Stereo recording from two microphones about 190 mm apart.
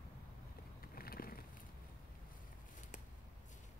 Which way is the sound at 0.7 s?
50° left (ahead or behind).